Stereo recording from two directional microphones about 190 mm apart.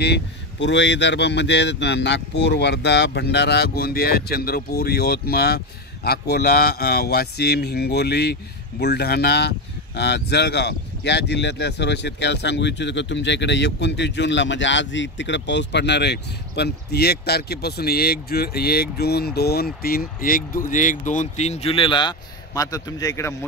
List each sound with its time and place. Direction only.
0.0 s speech: 65° left (ahead or behind); by 23.3 s 15° left (ahead or behind)